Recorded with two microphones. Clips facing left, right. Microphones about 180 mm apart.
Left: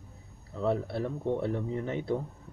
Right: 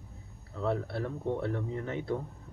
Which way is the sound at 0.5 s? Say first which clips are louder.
Left 2 dB; 15° left (ahead or behind).